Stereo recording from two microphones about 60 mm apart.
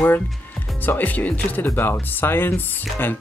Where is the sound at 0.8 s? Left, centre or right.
Left.